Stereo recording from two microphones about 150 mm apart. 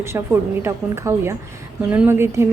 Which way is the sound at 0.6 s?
15° right (ahead or behind).